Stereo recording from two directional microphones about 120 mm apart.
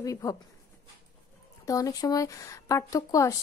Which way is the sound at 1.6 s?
30° left (ahead or behind).